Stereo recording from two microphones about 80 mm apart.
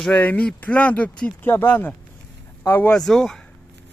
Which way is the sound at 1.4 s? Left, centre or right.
Left.